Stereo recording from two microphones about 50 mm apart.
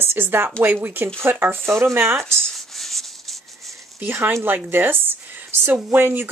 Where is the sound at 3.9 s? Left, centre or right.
Right.